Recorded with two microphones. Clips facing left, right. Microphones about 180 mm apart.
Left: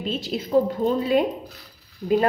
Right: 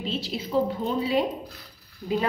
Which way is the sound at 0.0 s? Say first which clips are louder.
Left 3 dB; 50° left (ahead or behind).